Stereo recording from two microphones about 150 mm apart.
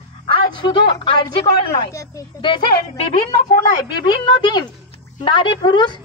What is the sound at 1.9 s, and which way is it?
Speech, 20° left (ahead or behind).